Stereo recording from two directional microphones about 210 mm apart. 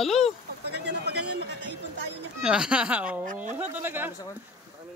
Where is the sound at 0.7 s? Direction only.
50° right (ahead or behind).